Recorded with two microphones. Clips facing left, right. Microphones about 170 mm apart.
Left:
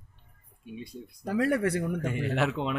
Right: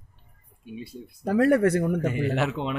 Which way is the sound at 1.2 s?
50° right (ahead or behind).